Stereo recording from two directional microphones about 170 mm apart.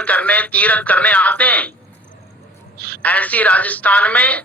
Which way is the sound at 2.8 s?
65° right (ahead or behind).